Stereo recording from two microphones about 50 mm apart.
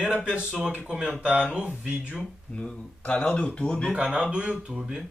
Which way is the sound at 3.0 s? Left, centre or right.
Left.